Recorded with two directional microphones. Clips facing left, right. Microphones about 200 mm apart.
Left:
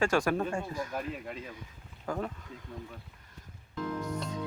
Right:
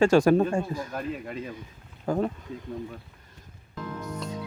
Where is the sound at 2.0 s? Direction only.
30° right (ahead or behind).